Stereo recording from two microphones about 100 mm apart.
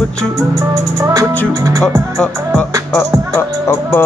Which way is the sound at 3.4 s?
25° left (ahead or behind).